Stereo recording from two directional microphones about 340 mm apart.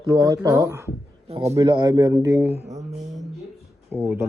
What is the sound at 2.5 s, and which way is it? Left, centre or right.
Speech, right.